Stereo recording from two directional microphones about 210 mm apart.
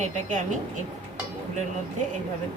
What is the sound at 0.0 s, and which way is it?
Speech, 35° right (ahead or behind).